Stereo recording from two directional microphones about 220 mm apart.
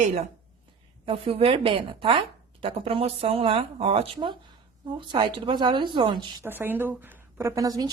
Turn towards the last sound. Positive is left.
turn(degrees=-15)  # may be behind; listen again after turning